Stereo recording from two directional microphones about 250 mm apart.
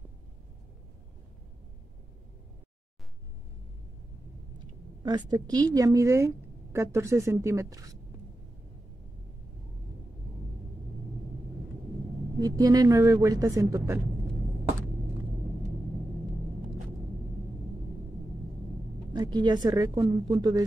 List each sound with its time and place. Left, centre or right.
4.6 s a woman's voice: centre
12.4 s speech: centre
19.1 s speech: centre